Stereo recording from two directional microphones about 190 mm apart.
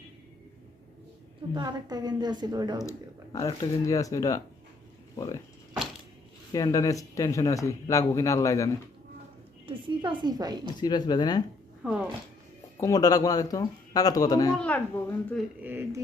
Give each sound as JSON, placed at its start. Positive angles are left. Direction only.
{"t": 1.5, "sound": "a woman's voice", "side_deg": -20}
{"t": 3.3, "sound": "speech", "side_deg": 20}
{"t": 6.5, "sound": "speech", "side_deg": 20}
{"t": 9.6, "sound": "a woman's voice", "side_deg": -25}
{"t": 10.8, "sound": "a man's voice", "side_deg": 20}
{"t": 11.8, "sound": "speech", "side_deg": -5}
{"t": 12.8, "sound": "a man's voice", "side_deg": 20}
{"t": 14.5, "sound": "speech", "side_deg": 5}
{"t": 15.6, "sound": "speech", "side_deg": -10}